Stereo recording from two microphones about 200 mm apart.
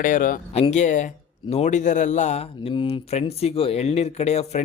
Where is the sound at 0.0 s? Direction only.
40° left (ahead or behind).